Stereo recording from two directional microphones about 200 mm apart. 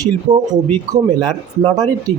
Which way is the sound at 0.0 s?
20° right (ahead or behind).